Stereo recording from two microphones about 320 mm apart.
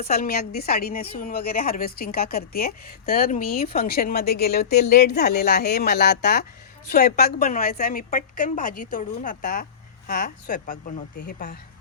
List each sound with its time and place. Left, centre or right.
0.0 s a woman's voice: left